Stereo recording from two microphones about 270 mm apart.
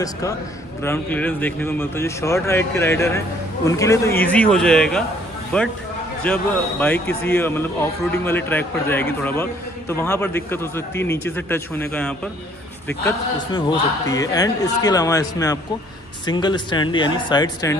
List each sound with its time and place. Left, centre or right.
0.8 s a man's voice: centre